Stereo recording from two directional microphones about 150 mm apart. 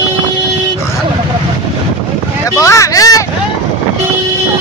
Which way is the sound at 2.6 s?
20° left (ahead or behind).